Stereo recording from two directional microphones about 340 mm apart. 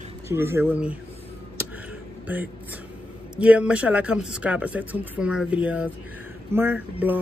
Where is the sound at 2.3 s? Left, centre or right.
Centre.